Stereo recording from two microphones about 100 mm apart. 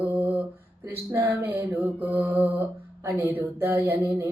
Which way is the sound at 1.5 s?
20° right (ahead or behind).